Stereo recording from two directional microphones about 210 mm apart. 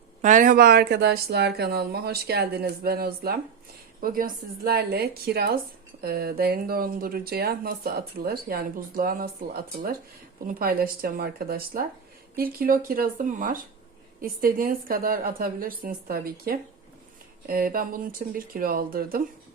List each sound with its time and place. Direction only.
0.2 s speech: 35° right (ahead or behind)